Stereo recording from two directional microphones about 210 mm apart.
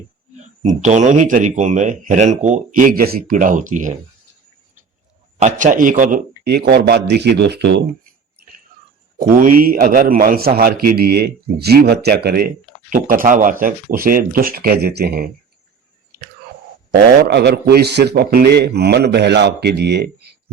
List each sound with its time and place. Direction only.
0.3 s speech: 35° right (ahead or behind)
5.4 s a man's voice: 35° right (ahead or behind); by 7.9 s 55° right (ahead or behind)
9.1 s a man's voice: 40° right (ahead or behind)
16.1 s chewing: 50° right (ahead or behind)
16.9 s a man's voice: 50° right (ahead or behind)